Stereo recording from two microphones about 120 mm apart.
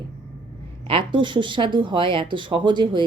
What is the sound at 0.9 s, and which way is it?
Speech, 45° right (ahead or behind).